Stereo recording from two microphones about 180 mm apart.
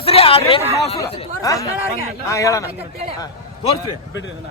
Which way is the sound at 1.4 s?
20° left (ahead or behind).